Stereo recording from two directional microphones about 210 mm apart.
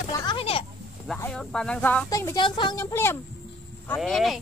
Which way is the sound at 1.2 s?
5° left (ahead or behind).